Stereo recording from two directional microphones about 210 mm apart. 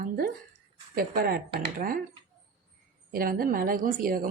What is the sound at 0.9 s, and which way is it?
Speech, 45° right (ahead or behind).